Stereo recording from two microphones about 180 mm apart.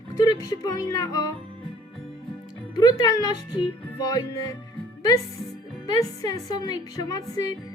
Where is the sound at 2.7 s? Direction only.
25° left (ahead or behind).